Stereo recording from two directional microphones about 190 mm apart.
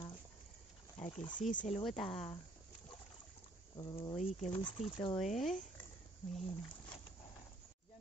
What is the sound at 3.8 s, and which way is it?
Speech, 20° left (ahead or behind).